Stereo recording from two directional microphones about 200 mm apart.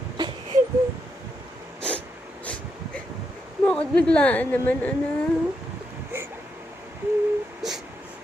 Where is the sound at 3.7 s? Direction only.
5° left (ahead or behind).